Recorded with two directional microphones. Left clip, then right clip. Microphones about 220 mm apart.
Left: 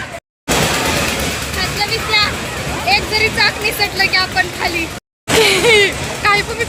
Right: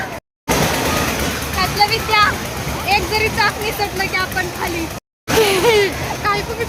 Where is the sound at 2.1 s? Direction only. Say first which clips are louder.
Right 1 dB; 40° right (ahead or behind); by 6.4 s 5° right (ahead or behind).